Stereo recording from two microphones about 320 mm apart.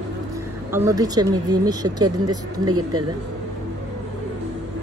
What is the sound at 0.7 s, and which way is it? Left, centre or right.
Speech, centre.